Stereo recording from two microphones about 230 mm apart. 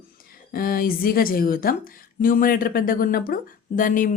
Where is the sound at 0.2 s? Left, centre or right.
Left.